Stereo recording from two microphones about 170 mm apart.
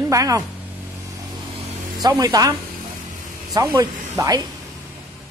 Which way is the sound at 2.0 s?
20° right (ahead or behind).